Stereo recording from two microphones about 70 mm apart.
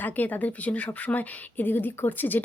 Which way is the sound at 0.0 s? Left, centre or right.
Left.